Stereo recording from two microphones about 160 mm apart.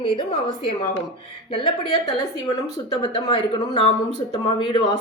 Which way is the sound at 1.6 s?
25° left (ahead or behind).